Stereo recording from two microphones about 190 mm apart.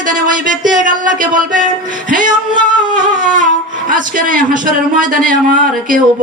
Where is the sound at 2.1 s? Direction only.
45° right (ahead or behind).